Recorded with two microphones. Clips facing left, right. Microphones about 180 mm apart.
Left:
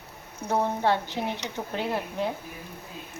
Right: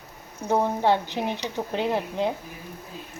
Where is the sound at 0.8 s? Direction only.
15° right (ahead or behind).